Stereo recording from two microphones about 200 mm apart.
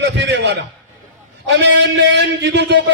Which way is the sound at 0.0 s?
60° right (ahead or behind).